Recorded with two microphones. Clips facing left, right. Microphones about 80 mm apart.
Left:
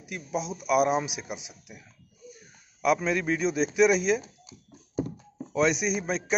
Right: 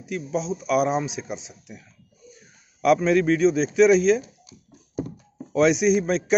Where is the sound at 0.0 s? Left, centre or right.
Centre.